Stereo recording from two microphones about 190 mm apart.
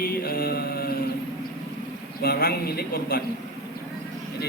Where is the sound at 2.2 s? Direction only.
55° left (ahead or behind).